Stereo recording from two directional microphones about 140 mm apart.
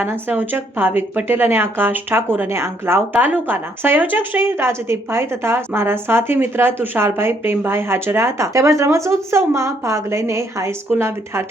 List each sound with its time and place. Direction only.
0.0 s speech: 15° right (ahead or behind)